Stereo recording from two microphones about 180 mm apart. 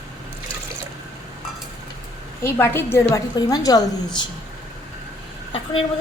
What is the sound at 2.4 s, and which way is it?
A woman's voice, 15° left (ahead or behind).